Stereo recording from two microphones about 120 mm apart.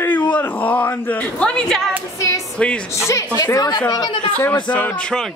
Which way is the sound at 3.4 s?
35° left (ahead or behind).